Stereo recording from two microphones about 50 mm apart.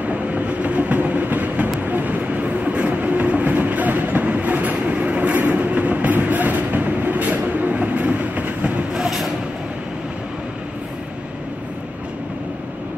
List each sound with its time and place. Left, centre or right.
0.0 s train: right
8.9 s vehicle: centre